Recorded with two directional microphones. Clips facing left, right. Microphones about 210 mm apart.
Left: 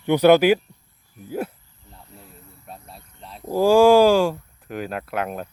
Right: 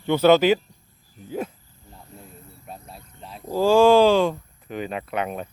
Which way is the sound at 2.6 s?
Centre (ahead or behind).